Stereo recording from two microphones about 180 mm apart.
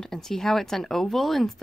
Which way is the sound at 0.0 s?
Centre (ahead or behind).